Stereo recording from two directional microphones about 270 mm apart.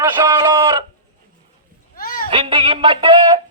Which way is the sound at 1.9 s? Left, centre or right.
Left.